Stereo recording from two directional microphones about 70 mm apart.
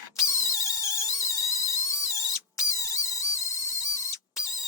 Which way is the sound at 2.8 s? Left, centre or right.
Left.